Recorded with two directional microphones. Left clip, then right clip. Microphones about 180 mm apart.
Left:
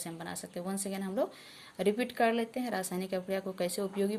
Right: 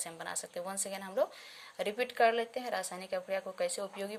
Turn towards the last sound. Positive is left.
turn(degrees=0)  # may be behind; listen again after turning